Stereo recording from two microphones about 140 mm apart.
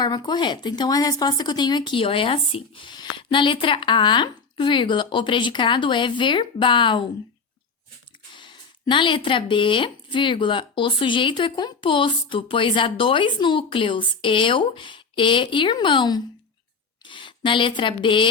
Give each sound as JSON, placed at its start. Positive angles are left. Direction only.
{"t": 0.0, "sound": "speech", "side_deg": 30}
{"t": 8.4, "sound": "speech", "side_deg": 35}